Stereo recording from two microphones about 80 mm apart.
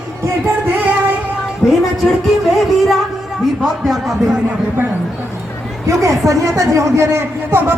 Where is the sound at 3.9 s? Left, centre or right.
Centre.